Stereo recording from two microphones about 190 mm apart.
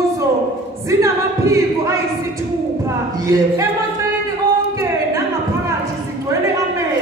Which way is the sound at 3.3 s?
15° right (ahead or behind).